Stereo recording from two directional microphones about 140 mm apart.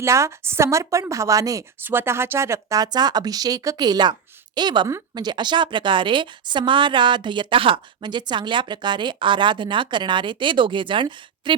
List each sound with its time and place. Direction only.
0.0 s a woman's voice: 20° right (ahead or behind); by 11.5 s 35° right (ahead or behind)